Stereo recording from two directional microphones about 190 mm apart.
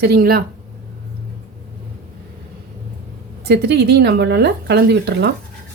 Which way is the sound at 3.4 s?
60° right (ahead or behind).